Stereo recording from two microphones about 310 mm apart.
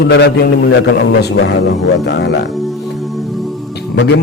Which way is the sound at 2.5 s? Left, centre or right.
Centre.